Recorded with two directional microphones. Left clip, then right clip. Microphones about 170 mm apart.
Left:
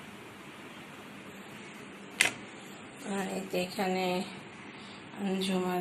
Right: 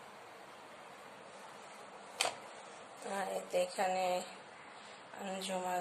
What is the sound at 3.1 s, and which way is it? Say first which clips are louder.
Speech: left 2 dB; 20° right (ahead or behind).